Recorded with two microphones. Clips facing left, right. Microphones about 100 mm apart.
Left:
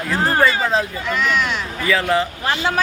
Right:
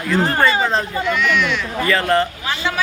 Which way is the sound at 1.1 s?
40° left (ahead or behind).